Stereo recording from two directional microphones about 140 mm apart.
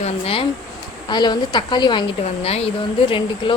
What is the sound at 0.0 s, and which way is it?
Speech, 45° left (ahead or behind).